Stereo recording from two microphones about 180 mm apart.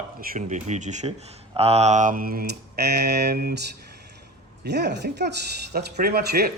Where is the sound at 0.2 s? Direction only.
45° right (ahead or behind).